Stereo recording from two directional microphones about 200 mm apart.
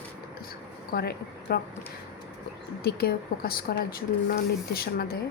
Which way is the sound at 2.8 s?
50° left (ahead or behind).